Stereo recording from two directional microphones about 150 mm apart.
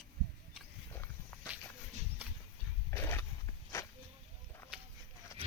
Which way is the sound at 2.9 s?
15° left (ahead or behind).